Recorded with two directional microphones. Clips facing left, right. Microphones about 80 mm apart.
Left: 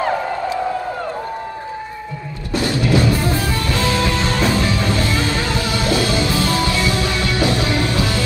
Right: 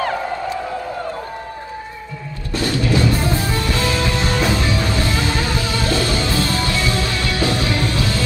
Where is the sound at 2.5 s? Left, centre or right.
Left.